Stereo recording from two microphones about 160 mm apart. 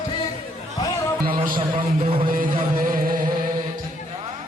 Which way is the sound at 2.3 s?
60° right (ahead or behind).